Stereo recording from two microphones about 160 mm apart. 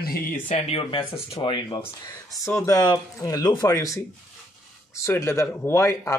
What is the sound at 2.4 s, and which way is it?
Speech, 15° left (ahead or behind).